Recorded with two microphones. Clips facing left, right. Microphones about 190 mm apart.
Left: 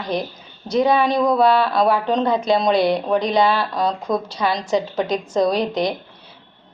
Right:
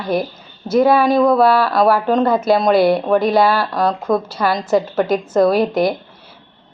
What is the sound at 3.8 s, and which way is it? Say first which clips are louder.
Speech: right 7 dB; 55° right (ahead or behind).